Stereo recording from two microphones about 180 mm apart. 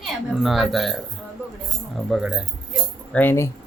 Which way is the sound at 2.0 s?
5° right (ahead or behind).